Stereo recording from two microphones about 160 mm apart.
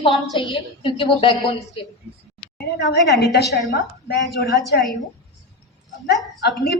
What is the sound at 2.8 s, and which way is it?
A woman's voice, 90° left.